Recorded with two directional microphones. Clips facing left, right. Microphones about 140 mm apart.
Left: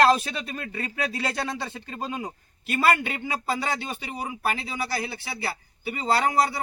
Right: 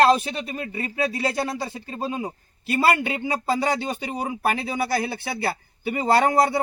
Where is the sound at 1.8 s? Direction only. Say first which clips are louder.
Right 4 dB; 25° right (ahead or behind).